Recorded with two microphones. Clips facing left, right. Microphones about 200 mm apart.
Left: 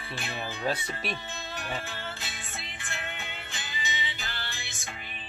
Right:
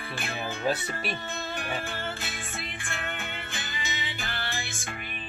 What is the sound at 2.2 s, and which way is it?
Music, 50° right (ahead or behind).